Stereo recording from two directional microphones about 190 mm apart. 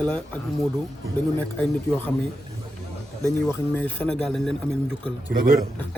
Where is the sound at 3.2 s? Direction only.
10° left (ahead or behind).